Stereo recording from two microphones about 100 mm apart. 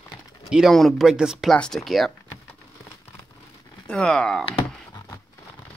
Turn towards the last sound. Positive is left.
turn(degrees=5)  # may be behind; listen again after turning